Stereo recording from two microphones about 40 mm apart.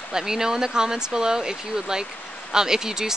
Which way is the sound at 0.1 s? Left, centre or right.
Centre.